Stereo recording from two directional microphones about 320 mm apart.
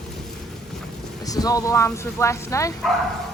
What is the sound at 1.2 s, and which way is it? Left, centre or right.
Speech, centre.